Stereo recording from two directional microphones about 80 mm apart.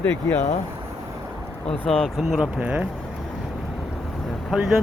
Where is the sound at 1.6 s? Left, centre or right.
Centre.